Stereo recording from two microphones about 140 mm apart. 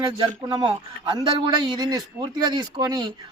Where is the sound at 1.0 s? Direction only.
35° right (ahead or behind).